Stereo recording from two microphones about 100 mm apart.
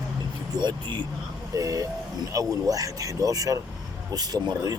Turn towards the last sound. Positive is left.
turn(degrees=-40)  # may be behind; listen again after turning